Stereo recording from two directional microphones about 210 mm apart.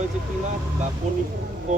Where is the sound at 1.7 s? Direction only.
35° right (ahead or behind).